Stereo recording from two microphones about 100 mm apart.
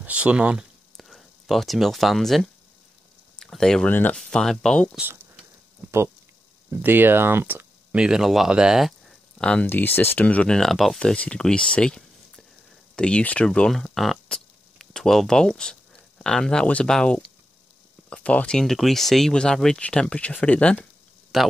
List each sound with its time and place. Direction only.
0.0 s speech: 15° right (ahead or behind)
0.9 s speech: centre (ahead or behind)
3.9 s speech: 20° left (ahead or behind)
4.2 s speech: 5° left (ahead or behind)
6.7 s speech: 20° right (ahead or behind)
8.0 s speech: 5° right (ahead or behind)
9.4 s speech: 10° left (ahead or behind)
21.3 s speech: centre (ahead or behind)